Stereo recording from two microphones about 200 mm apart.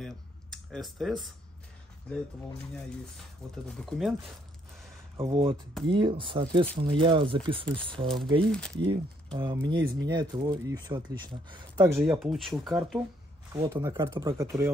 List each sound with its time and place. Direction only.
0.0 s computer keyboard: centre (ahead or behind)
3.6 s speech: centre (ahead or behind)
5.1 s speech: 25° right (ahead or behind)
8.5 s speech: 5° left (ahead or behind)
8.7 s speech: 25° right (ahead or behind)
11.8 s speech: 15° right (ahead or behind)
12.1 s speech: centre (ahead or behind)
13.5 s speech: 15° right (ahead or behind)